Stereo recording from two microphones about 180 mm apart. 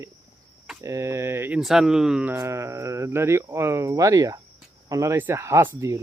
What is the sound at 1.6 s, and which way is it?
Speech, centre (ahead or behind).